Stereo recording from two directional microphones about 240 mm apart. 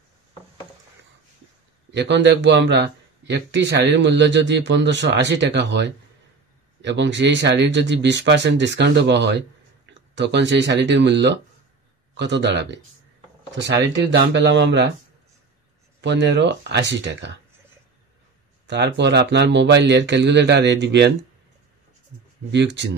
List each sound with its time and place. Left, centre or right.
1.9 s a man's voice: right
16.0 s a man's voice: right
18.7 s a man's voice: right
22.5 s a man's voice: right